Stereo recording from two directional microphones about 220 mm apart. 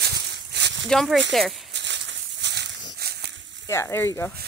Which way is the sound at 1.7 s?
50° right (ahead or behind).